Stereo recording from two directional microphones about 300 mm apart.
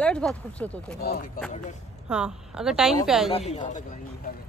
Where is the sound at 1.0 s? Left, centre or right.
Left.